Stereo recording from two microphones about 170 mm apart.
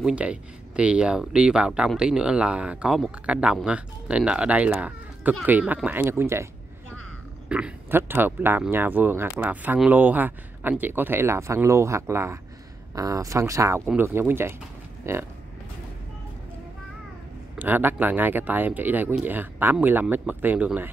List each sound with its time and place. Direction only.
0.0 s speech: 5° right (ahead or behind)
17.6 s speech: 10° right (ahead or behind)